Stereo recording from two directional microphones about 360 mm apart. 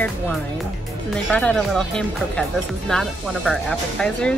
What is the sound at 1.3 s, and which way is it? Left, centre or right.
Speech, centre.